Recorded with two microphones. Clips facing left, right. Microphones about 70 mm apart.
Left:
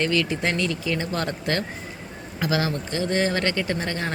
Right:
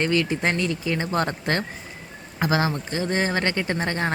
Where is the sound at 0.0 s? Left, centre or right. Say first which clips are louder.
Right 1 dB; right.